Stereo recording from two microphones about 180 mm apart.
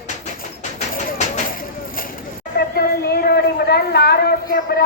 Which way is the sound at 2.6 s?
55° left (ahead or behind).